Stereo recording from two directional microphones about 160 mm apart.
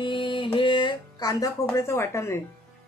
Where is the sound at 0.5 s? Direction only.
30° left (ahead or behind).